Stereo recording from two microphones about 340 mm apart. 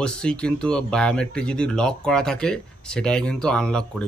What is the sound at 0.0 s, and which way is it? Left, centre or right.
Speech, centre.